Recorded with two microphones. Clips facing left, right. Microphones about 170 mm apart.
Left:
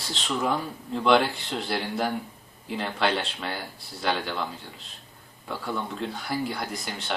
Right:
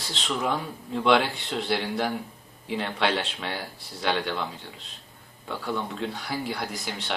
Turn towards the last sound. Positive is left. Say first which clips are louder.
# right 1 dB
turn(degrees=0)  # may be behind; listen again after turning